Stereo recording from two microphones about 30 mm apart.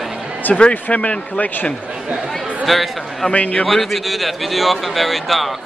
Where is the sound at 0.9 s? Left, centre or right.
Left.